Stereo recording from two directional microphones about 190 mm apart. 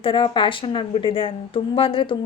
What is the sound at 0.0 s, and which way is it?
Speech, 25° left (ahead or behind).